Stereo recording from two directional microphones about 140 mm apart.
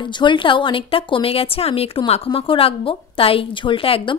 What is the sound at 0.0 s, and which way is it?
A woman's voice, 35° left (ahead or behind).